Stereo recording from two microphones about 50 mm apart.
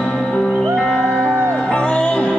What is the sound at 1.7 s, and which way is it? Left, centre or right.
Music, left.